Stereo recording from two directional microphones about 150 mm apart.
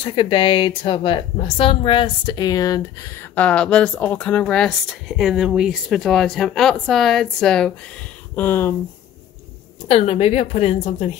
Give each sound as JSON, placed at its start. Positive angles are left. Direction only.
{"t": 0.0, "sound": "a woman's voice", "side_deg": 35}
{"t": 8.4, "sound": "a woman's voice", "side_deg": 15}
{"t": 9.8, "sound": "a woman's voice", "side_deg": 45}